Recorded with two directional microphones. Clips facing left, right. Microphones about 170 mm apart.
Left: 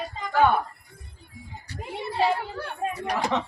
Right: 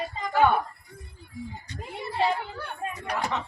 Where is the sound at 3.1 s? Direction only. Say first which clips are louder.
Left 3 dB; 90° left.